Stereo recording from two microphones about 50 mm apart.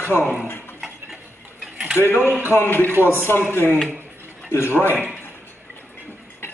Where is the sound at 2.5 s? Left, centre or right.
Left.